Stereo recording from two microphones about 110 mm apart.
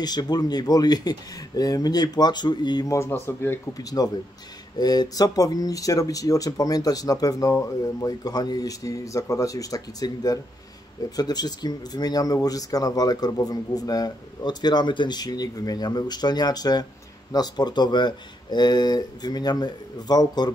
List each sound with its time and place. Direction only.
0.0 s speech: 40° left (ahead or behind)
2.9 s speech: 25° left (ahead or behind)
3.7 s speech: 35° left (ahead or behind)